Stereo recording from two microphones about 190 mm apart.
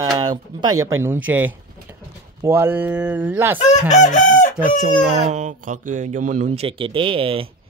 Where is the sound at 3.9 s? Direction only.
40° left (ahead or behind).